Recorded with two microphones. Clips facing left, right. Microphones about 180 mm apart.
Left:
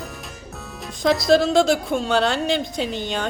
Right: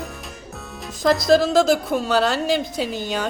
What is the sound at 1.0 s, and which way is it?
Speech, centre (ahead or behind).